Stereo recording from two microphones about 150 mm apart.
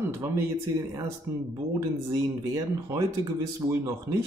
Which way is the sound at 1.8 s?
20° right (ahead or behind).